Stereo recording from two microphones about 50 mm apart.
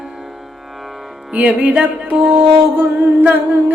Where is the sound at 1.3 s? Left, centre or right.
Right.